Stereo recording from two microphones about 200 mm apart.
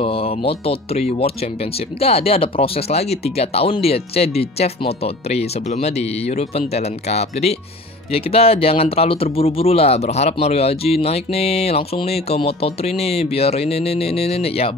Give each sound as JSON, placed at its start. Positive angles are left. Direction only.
{"t": 0.0, "sound": "speech", "side_deg": 30}